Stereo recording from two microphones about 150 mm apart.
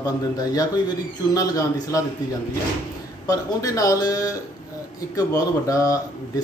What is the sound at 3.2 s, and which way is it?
A man's voice, 20° left (ahead or behind).